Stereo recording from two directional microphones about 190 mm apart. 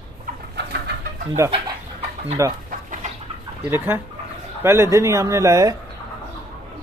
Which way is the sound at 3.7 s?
10° right (ahead or behind).